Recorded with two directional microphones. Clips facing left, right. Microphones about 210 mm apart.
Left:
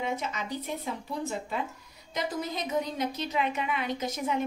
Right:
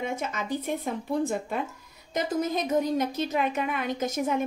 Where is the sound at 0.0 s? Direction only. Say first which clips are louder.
Right 2 dB; 50° right (ahead or behind).